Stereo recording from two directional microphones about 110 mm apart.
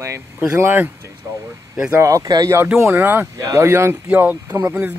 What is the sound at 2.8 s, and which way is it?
Speech, 15° right (ahead or behind).